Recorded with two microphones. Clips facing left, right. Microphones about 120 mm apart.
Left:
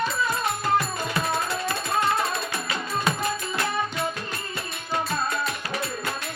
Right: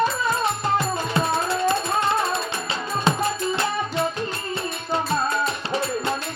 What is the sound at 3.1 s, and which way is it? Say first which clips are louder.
Music: right 6 dB; 30° right (ahead or behind).